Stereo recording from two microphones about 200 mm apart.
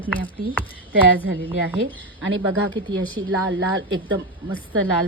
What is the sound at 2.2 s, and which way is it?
Speech, 80° right.